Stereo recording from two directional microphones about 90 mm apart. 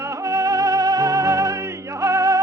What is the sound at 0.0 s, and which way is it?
Music, 35° right (ahead or behind).